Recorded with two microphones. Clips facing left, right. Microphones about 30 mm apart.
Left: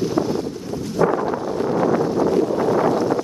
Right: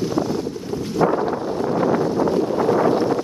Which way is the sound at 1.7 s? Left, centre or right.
Centre.